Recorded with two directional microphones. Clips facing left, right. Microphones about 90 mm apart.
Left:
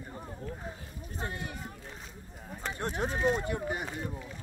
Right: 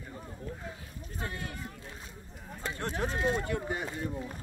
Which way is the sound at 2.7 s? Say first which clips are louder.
Left 1 dB; 20° left (ahead or behind).